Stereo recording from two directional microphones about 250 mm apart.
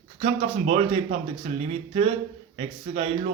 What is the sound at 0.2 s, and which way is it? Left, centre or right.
Speech, right.